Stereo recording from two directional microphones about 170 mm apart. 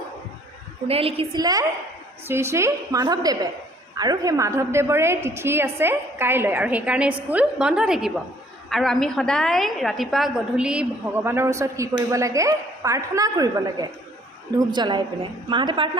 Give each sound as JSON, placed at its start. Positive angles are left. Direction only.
{"t": 0.9, "sound": "a woman's voice", "side_deg": -35}